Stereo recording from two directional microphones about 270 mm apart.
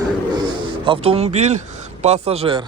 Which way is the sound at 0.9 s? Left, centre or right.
Right.